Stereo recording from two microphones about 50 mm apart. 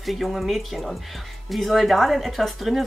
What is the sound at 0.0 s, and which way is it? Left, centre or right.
Speech, centre.